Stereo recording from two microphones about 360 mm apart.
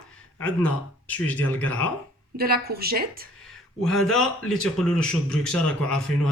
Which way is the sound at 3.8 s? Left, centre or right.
Centre.